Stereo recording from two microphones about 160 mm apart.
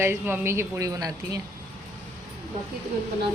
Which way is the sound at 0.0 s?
15° right (ahead or behind).